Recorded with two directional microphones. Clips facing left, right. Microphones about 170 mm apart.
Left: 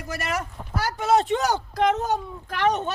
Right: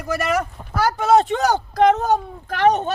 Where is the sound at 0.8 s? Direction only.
45° right (ahead or behind).